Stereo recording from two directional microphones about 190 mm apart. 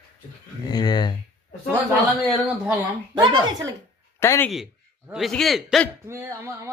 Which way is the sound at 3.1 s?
25° right (ahead or behind).